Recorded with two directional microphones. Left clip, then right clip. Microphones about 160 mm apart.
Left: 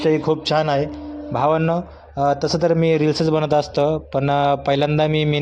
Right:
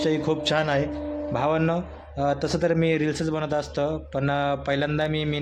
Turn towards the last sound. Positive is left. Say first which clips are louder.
# left 7 dB
turn(degrees=35)  # may be behind; listen again after turning